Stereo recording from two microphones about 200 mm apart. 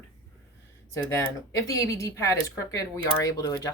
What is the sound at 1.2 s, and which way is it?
Speech, 15° left (ahead or behind).